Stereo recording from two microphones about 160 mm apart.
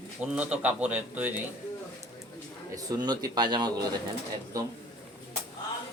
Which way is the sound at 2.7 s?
25° right (ahead or behind).